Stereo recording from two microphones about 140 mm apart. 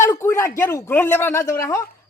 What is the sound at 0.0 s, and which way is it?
Speech, 20° left (ahead or behind).